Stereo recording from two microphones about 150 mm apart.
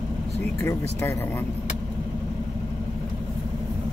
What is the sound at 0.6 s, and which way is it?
Speech, 15° left (ahead or behind).